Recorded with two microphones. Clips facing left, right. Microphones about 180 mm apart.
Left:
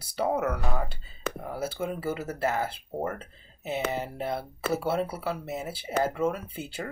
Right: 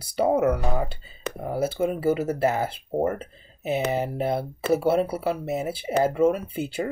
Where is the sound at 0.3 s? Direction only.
20° right (ahead or behind).